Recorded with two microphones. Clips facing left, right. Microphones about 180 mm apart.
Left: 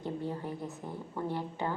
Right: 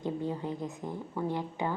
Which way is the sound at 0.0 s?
15° right (ahead or behind).